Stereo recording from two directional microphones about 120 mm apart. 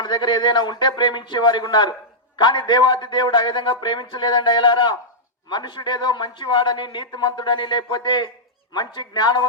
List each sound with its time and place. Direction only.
0.0 s a man's voice: 40° left (ahead or behind)